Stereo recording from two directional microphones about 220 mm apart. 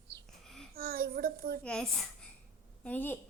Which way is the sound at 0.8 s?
45° right (ahead or behind).